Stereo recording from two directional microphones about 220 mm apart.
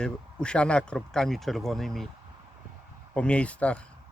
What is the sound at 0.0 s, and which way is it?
Speech, 5° left (ahead or behind).